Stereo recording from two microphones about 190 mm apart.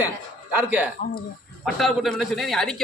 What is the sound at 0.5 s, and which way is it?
Speech, 10° right (ahead or behind).